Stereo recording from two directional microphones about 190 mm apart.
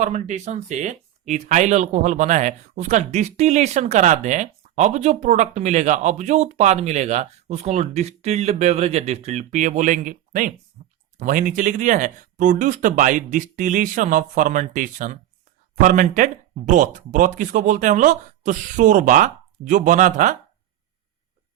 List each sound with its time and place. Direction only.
0.0 s speech: 40° right (ahead or behind)
10.8 s a sound: 40° right (ahead or behind)
11.2 s speech: 45° right (ahead or behind)